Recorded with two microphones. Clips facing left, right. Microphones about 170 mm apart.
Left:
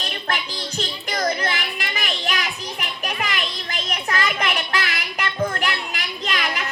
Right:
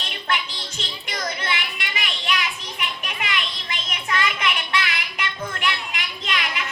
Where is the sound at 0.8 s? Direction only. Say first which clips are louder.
Left 6 dB; 45° left (ahead or behind).